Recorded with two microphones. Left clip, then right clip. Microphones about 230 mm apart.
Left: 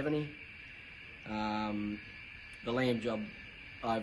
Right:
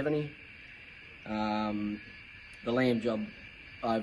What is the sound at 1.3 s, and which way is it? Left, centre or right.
Speech, centre.